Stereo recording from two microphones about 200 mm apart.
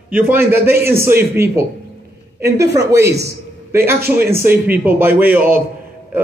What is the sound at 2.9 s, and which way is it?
A man's voice, 15° right (ahead or behind).